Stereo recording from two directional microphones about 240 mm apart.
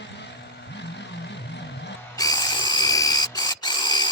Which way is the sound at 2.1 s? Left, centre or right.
Centre.